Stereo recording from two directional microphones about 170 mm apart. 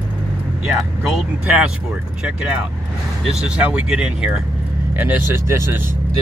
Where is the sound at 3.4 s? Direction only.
5° right (ahead or behind).